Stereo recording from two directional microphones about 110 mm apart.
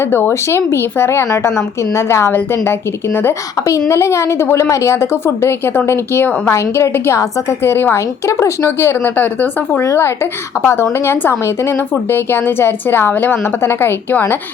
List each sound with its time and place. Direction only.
0.0 s a woman's voice: 20° left (ahead or behind)